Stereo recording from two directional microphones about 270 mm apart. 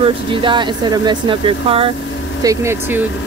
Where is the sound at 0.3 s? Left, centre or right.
Centre.